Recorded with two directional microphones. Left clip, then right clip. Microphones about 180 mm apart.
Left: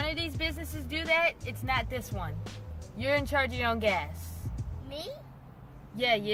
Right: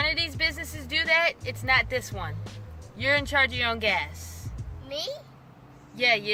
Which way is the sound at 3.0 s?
10° left (ahead or behind).